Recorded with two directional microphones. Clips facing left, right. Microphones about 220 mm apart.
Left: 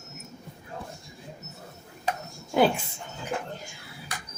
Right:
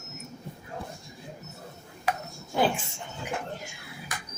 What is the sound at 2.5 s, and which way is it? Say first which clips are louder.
Speech: left 4 dB; 85° left.